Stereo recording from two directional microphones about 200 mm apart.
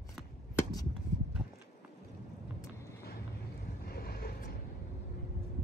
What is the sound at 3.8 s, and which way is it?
Vehicle, 50° left (ahead or behind).